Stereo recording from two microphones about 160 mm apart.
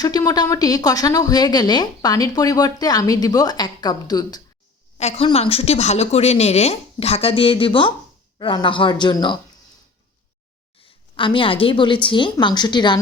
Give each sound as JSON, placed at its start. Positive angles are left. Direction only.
{"t": 0.0, "sound": "a woman's voice", "side_deg": 25}
{"t": 4.9, "sound": "a woman's voice", "side_deg": 40}
{"t": 10.8, "sound": "a woman's voice", "side_deg": 30}